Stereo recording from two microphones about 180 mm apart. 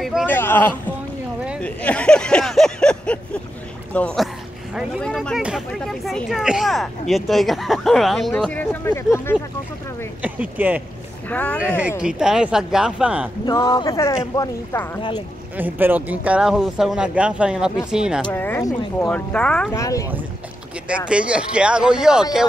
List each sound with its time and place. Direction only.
0.0 s a sound: 5° right (ahead or behind)
0.3 s a sound: 10° left (ahead or behind)
1.6 s speech: 10° left (ahead or behind)
10.2 s speech: 10° right (ahead or behind)
11.2 s speech: 10° left (ahead or behind)
12.0 s speech: 5° right (ahead or behind)
13.5 s speech: 25° left (ahead or behind)
15.5 s speech: 10° right (ahead or behind)
18.3 s speech: 10° left (ahead or behind)
19.7 s speech: 20° left (ahead or behind)
20.9 s speech: 5° right (ahead or behind)